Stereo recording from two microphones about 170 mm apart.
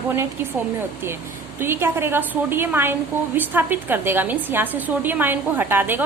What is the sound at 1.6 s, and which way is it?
A woman's voice, 15° right (ahead or behind).